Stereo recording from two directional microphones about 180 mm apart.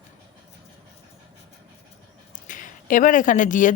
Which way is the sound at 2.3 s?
45° left (ahead or behind).